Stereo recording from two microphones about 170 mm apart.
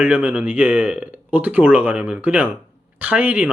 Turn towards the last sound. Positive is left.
turn(degrees=-10)  # may be behind; listen again after turning